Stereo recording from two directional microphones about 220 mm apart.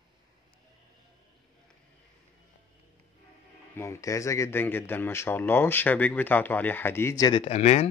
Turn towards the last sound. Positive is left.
turn(degrees=30)  # may be behind; listen again after turning